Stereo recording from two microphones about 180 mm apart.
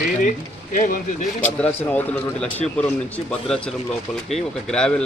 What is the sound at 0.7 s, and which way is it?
Speech, 45° left (ahead or behind).